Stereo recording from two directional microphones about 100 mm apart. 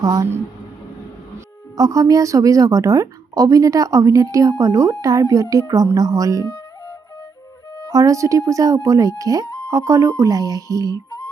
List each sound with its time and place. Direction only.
0.0 s a woman's voice: 40° right (ahead or behind)
1.7 s a woman's voice: 35° right (ahead or behind)
7.9 s a woman's voice: 35° right (ahead or behind)